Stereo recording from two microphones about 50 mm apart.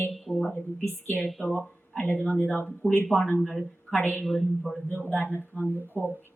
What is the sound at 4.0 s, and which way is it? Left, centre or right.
Speech, left.